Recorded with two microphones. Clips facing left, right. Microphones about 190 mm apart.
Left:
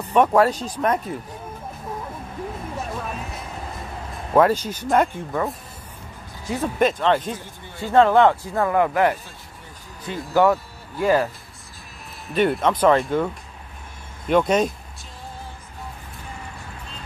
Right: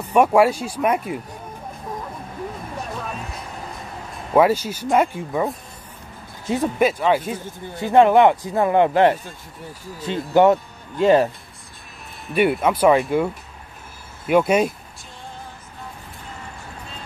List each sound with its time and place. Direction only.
0.0 s speech: 10° right (ahead or behind)
3.1 s music: centre (ahead or behind)
4.3 s speech: 10° right (ahead or behind)
6.5 s speech: 10° right (ahead or behind)
10.3 s speech: 25° right (ahead or behind)
12.4 s speech: 10° right (ahead or behind)